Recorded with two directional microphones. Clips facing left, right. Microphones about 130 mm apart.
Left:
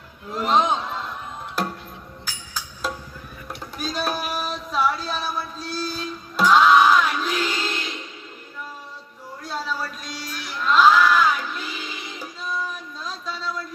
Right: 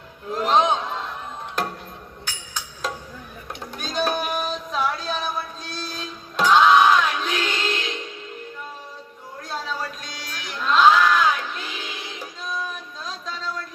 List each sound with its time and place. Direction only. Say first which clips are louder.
0.3 s a man's voice: right 1 dB; 5° left (ahead or behind)
2.2 s music: even; 5° left (ahead or behind)
3.8 s child singing: right 2 dB; 5° left (ahead or behind)
9.4 s a sound: left 1 dB; 5° left (ahead or behind)
10.0 s crowd: left 2 dB; 5° left (ahead or behind)
13.2 s a sound: left 1 dB; 5° left (ahead or behind)